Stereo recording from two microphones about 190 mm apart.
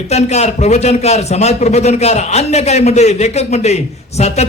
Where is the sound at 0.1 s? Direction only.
35° left (ahead or behind).